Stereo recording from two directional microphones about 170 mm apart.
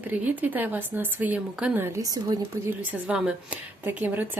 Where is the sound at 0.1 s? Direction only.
10° right (ahead or behind).